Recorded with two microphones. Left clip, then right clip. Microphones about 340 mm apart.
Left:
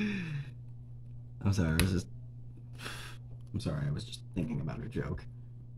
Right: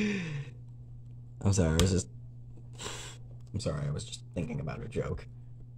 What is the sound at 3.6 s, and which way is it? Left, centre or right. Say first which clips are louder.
Speech: right 3 dB; centre.